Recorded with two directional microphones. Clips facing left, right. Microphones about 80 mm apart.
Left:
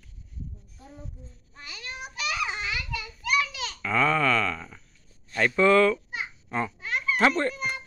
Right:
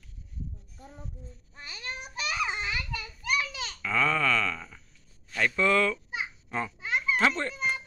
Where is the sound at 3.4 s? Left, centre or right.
Right.